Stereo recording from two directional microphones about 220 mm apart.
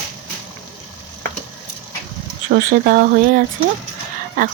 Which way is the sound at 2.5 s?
40° right (ahead or behind).